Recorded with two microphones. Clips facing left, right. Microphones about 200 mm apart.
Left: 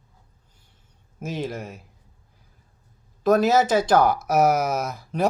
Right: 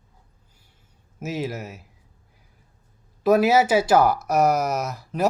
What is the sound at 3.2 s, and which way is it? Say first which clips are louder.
Speech: right 1 dB; 10° right (ahead or behind).